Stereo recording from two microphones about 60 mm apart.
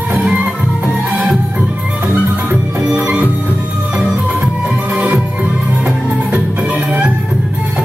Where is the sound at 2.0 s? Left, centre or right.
Right.